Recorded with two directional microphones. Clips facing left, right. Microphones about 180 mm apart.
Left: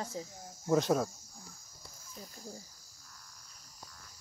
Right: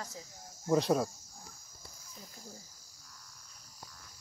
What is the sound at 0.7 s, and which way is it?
Speech, centre (ahead or behind).